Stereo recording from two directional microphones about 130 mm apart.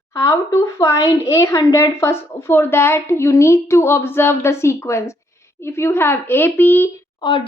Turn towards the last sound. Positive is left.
turn(degrees=35)  # may be behind; listen again after turning